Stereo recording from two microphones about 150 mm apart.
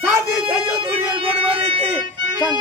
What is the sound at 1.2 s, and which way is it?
Music, 35° right (ahead or behind).